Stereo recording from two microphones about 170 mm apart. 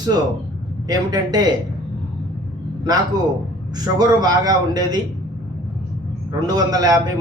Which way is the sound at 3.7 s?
25° right (ahead or behind).